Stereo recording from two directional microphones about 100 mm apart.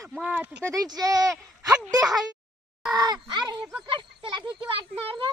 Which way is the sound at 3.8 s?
55° right (ahead or behind).